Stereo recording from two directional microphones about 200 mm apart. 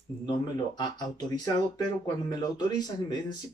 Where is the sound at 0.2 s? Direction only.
20° left (ahead or behind).